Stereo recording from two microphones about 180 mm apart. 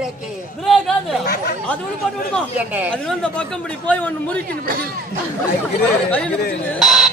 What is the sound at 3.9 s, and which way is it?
Speech, 10° left (ahead or behind).